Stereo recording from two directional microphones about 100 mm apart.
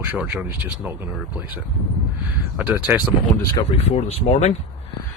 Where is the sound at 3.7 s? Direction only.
90° left.